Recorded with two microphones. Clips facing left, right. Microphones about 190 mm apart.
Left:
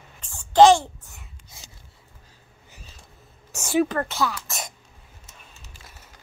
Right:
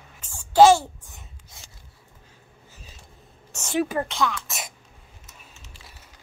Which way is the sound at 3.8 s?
10° right (ahead or behind).